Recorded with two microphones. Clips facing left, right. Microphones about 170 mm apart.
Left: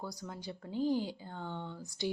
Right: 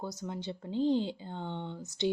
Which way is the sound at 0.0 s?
20° right (ahead or behind).